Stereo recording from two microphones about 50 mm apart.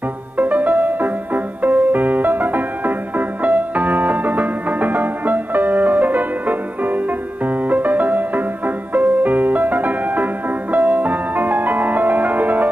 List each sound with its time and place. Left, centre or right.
0.4 s music: right